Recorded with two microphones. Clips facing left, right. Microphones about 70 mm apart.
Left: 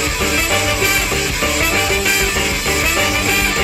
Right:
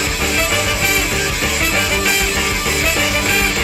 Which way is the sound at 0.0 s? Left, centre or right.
Centre.